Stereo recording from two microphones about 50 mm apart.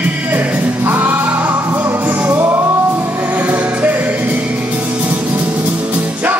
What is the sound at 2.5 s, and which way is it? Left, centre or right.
Music, right.